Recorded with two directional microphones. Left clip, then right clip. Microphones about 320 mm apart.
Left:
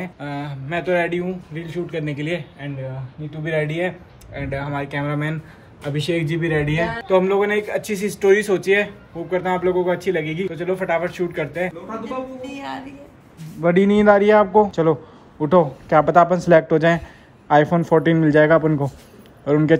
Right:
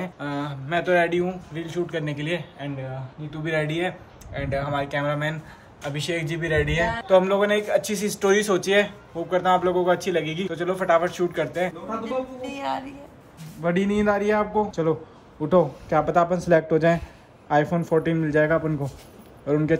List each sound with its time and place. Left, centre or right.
0.0 s a man's voice: centre
3.7 s a man's voice: centre